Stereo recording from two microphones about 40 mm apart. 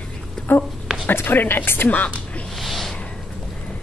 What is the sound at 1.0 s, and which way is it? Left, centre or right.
Speech, left.